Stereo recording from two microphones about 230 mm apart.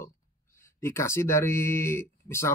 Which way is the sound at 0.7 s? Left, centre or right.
Centre.